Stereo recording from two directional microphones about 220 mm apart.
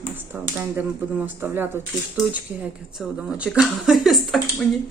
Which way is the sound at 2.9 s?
5° right (ahead or behind).